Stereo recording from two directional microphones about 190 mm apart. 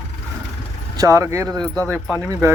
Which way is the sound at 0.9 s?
15° right (ahead or behind).